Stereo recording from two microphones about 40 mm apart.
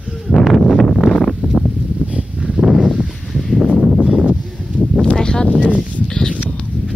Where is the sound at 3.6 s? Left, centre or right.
Right.